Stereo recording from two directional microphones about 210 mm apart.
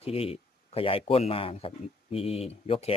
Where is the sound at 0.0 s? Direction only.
25° left (ahead or behind).